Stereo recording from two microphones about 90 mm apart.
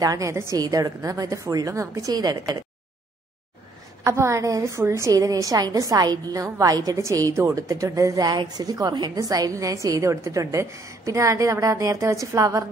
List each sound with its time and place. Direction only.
0.0 s a woman's voice: 40° right (ahead or behind)
0.6 s a woman's voice: 45° right (ahead or behind)
4.0 s a woman's voice: 35° right (ahead or behind)